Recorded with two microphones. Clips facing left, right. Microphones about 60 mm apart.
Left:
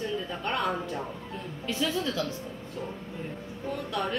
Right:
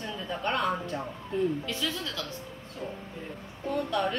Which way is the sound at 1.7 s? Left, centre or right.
Left.